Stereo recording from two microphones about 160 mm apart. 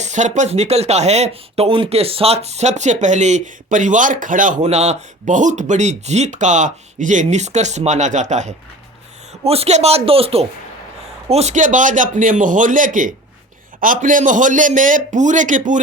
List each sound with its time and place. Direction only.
0.0 s speech: 50° right (ahead or behind)